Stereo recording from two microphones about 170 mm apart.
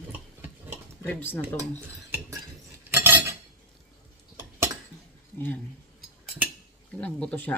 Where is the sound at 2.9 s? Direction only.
10° right (ahead or behind).